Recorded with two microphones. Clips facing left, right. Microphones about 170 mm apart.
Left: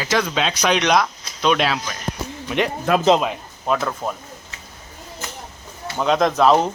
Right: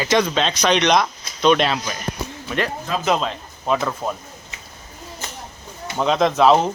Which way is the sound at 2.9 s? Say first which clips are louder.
Left 7 dB; 60° left (ahead or behind).